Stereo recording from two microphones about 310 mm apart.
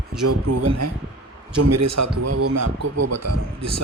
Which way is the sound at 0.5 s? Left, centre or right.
Right.